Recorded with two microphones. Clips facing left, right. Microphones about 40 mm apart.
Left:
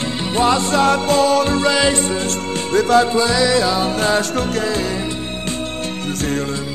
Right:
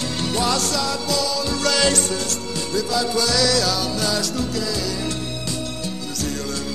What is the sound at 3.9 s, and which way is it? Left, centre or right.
Music, left.